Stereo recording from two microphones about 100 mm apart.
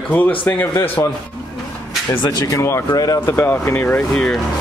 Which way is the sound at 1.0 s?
40° left (ahead or behind).